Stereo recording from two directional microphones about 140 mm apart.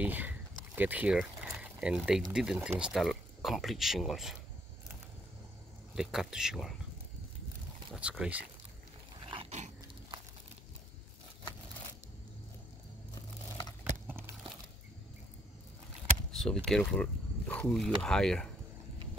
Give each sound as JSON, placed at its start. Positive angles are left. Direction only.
{"t": 0.0, "sound": "speech", "side_deg": -10}
{"t": 5.9, "sound": "speech", "side_deg": -5}
{"t": 7.9, "sound": "speech", "side_deg": -5}
{"t": 9.2, "sound": "dog", "side_deg": -40}
{"t": 13.1, "sound": "a sound", "side_deg": 30}
{"t": 14.0, "sound": "a sound", "side_deg": -15}
{"t": 16.3, "sound": "speech", "side_deg": 5}